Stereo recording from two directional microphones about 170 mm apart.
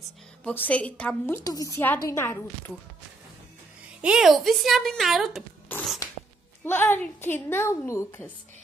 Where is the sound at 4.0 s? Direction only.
5° right (ahead or behind).